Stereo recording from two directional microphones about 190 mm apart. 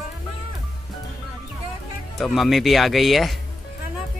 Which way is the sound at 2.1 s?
Centre (ahead or behind).